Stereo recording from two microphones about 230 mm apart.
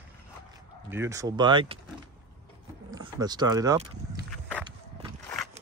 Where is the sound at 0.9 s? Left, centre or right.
Centre.